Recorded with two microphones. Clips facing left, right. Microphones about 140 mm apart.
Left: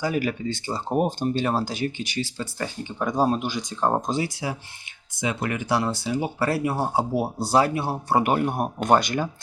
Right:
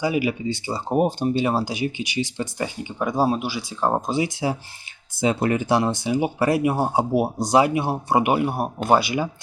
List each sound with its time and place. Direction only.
0.0 s speech: 10° right (ahead or behind)
4.3 s speech: 25° right (ahead or behind); by 9.3 s 10° right (ahead or behind)